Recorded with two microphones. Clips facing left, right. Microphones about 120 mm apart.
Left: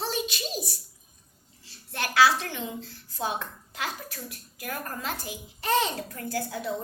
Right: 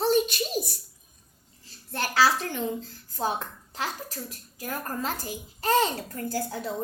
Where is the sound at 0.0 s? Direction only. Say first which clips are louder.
Right 8 dB; 50° right (ahead or behind).